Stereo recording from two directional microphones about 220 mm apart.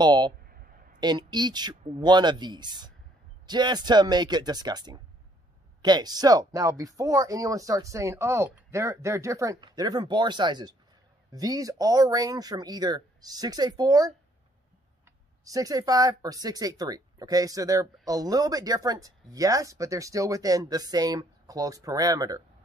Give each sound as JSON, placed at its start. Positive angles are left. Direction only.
{"t": 0.0, "sound": "speech", "side_deg": -20}
{"t": 0.5, "sound": "a sound", "side_deg": -40}
{"t": 0.9, "sound": "speech", "side_deg": -20}
{"t": 15.4, "sound": "speech", "side_deg": -15}